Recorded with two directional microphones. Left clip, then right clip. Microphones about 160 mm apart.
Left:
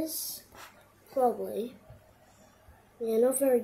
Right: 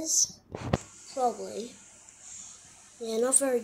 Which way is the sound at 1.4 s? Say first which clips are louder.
Left 3 dB; 5° left (ahead or behind).